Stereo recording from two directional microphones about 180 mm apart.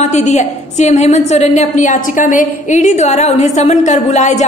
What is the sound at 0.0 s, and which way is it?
A woman's voice, 40° left (ahead or behind).